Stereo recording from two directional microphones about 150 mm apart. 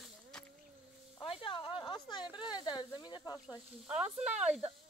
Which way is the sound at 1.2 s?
35° left (ahead or behind).